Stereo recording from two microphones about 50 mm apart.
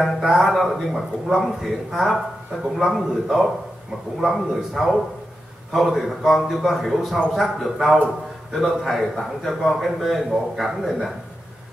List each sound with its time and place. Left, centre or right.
0.2 s a man's voice: centre